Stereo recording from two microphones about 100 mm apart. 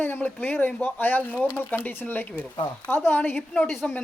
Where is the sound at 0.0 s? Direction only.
20° left (ahead or behind).